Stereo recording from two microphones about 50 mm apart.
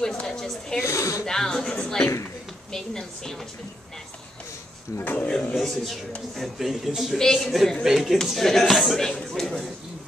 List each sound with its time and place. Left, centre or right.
0.0 s speech: centre
0.8 s speech: left
1.2 s a woman's voice: centre
5.0 s speech: left
5.6 s a man's voice: centre
7.2 s a woman's voice: centre
9.3 s a sound: centre